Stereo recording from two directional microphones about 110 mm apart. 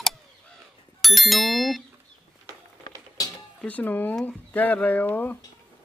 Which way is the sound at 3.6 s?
15° left (ahead or behind).